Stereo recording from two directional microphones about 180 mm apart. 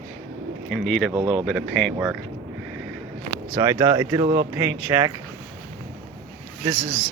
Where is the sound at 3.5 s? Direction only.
20° right (ahead or behind).